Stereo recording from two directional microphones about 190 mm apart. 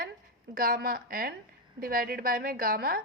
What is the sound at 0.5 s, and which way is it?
A woman's voice, 50° right (ahead or behind).